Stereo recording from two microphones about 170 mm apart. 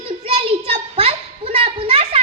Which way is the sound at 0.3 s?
35° right (ahead or behind).